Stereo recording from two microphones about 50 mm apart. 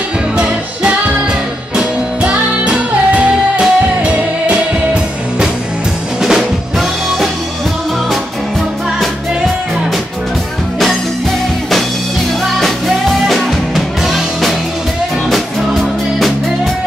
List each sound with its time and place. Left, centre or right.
2.2 s music: right
6.2 s drum kit: centre
12.5 s music: centre